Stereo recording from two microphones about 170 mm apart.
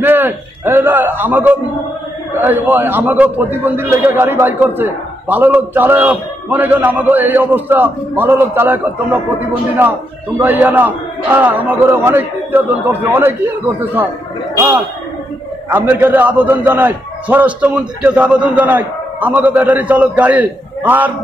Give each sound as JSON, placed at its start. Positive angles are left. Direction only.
{"t": 0.0, "sound": "a man's voice", "side_deg": -10}
{"t": 10.4, "sound": "a man's voice", "side_deg": -10}